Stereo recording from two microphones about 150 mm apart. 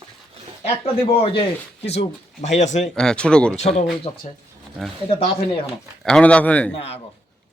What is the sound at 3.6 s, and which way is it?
Speech, 45° left (ahead or behind).